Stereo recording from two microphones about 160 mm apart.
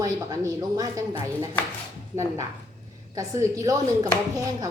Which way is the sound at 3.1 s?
20° right (ahead or behind).